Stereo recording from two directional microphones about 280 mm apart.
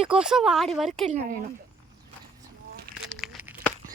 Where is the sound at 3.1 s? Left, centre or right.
Centre.